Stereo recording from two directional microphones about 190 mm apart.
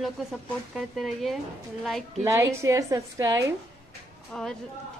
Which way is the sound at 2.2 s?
15° right (ahead or behind).